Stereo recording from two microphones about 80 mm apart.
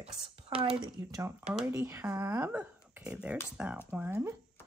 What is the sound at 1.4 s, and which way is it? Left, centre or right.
Speech, centre.